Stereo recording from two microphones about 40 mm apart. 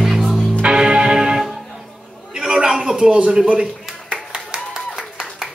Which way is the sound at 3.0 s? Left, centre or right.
Right.